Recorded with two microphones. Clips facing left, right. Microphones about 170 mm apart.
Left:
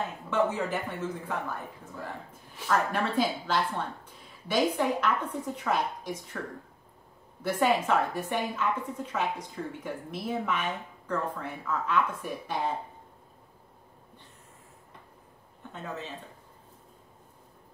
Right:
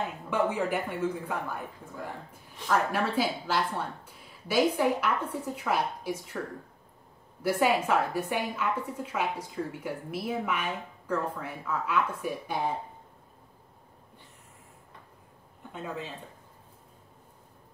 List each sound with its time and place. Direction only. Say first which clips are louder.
0.3 s a woman's voice: even; 10° right (ahead or behind)
2.7 s a woman's voice: even; 10° right (ahead or behind)
15.7 s speech: right 1 dB; 10° right (ahead or behind)